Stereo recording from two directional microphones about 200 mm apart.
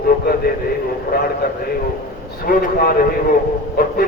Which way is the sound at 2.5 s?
45° left (ahead or behind).